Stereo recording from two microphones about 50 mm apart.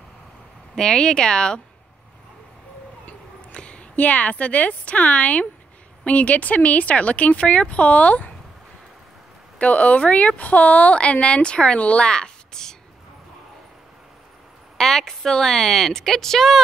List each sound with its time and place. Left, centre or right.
0.7 s a woman's voice: centre
3.1 s speech: left
9.6 s speech: left
14.8 s a woman's voice: centre